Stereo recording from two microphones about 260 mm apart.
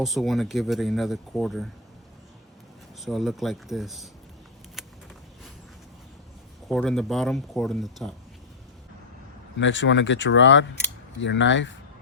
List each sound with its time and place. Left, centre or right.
0.0 s speech: centre
3.0 s speech: centre
4.8 s a sound: centre
6.7 s speech: centre
9.6 s speech: left